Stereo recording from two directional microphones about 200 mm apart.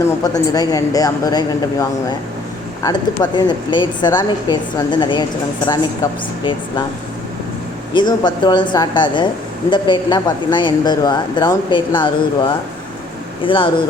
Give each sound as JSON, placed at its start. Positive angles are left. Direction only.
{"t": 0.3, "sound": "a woman's voice", "side_deg": 20}
{"t": 7.9, "sound": "speech", "side_deg": 20}